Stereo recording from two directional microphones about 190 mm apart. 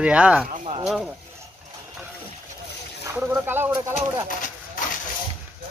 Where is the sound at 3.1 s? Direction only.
10° right (ahead or behind).